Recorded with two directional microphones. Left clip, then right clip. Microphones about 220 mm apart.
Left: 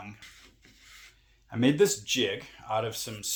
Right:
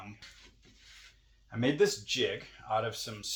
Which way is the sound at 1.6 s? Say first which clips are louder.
Left 4 dB; 50° left (ahead or behind).